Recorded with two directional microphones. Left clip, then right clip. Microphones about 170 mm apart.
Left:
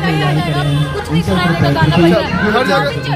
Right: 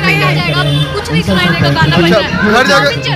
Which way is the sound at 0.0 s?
15° left (ahead or behind).